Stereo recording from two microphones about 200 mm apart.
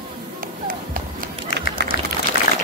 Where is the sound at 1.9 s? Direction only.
55° left (ahead or behind).